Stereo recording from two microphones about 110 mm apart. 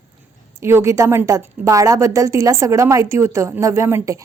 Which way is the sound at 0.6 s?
25° right (ahead or behind).